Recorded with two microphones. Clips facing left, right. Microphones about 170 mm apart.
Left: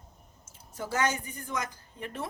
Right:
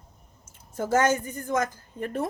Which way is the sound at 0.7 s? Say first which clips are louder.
Right 7 dB; 45° right (ahead or behind).